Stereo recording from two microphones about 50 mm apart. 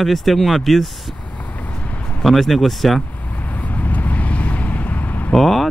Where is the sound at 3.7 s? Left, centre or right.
Left.